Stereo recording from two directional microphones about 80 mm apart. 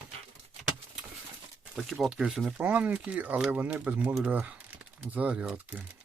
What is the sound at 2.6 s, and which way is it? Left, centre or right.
Speech, centre.